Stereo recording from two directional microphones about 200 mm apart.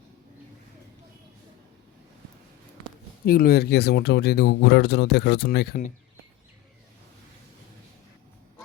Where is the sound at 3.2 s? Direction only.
45° left (ahead or behind).